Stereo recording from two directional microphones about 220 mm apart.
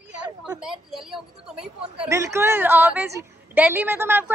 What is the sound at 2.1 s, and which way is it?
A woman's voice, 15° right (ahead or behind).